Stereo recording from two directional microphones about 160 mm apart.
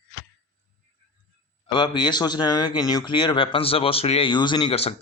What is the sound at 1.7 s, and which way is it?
Speech, 30° left (ahead or behind).